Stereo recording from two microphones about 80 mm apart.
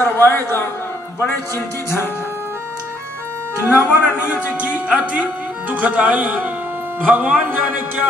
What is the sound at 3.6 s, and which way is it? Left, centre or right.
Speech, left.